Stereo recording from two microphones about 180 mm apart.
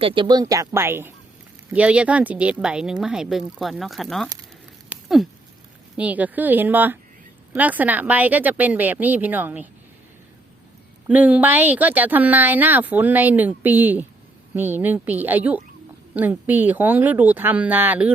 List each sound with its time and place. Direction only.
0.0 s speech: 25° right (ahead or behind); by 4.3 s centre (ahead or behind)
4.9 s a sound: centre (ahead or behind)
6.0 s speech: 10° right (ahead or behind)
11.1 s speech: 10° right (ahead or behind)